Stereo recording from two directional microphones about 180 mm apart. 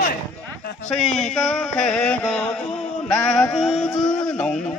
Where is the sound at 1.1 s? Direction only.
Centre (ahead or behind).